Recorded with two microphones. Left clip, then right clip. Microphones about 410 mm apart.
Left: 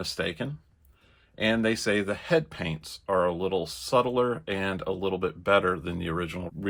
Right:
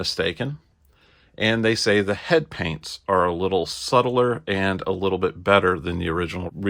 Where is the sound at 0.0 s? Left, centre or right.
Right.